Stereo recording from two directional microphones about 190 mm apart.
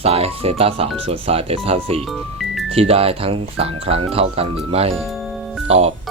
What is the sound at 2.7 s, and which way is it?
Speech, 30° right (ahead or behind).